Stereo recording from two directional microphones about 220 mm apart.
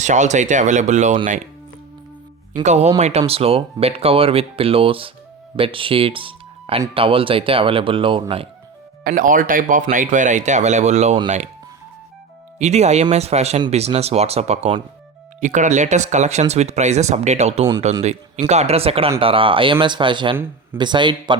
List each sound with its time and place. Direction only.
0.0 s speech: 35° right (ahead or behind)
2.6 s speech: 30° right (ahead or behind)
9.0 s speech: 40° right (ahead or behind)
12.5 s speech: 30° right (ahead or behind)